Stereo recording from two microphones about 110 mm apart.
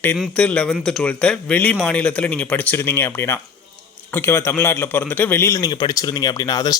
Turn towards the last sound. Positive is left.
turn(degrees=35)  # may be behind; listen again after turning